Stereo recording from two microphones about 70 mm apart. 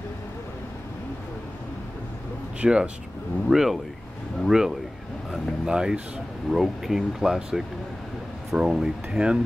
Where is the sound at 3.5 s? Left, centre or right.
Centre.